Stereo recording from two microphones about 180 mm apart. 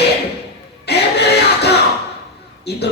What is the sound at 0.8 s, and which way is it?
Music, 65° left (ahead or behind).